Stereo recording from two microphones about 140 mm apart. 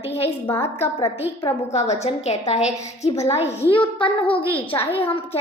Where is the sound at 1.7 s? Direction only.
50° left (ahead or behind).